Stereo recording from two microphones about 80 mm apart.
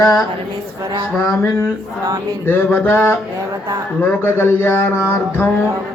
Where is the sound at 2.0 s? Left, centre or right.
Right.